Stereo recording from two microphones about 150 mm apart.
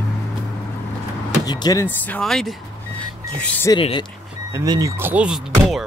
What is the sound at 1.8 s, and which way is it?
Speech, 10° left (ahead or behind).